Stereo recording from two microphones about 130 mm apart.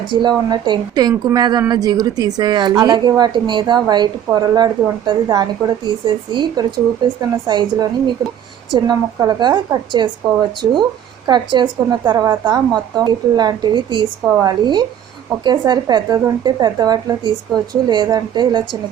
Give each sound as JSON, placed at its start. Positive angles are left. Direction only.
{"t": 0.1, "sound": "a woman's voice", "side_deg": -35}
{"t": 11.3, "sound": "a woman's voice", "side_deg": -35}
{"t": 12.1, "sound": "a woman's voice", "side_deg": -25}